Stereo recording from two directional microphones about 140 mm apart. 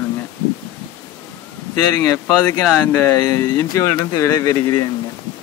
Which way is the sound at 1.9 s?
25° left (ahead or behind).